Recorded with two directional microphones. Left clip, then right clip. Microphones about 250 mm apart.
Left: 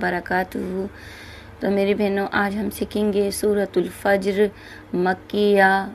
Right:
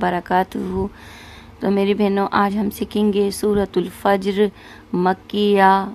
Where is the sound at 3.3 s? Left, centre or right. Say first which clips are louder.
Right 1 dB; centre.